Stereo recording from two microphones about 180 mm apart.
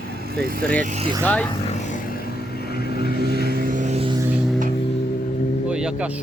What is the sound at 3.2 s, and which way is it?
Vehicle, 60° right (ahead or behind).